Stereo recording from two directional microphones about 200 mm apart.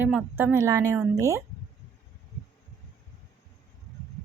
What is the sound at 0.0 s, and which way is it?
A woman's voice, 5° right (ahead or behind).